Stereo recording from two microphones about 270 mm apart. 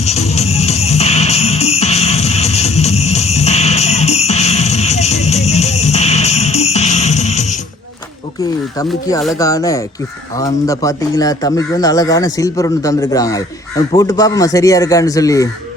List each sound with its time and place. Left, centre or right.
0.0 s music: left
9.4 s speech: centre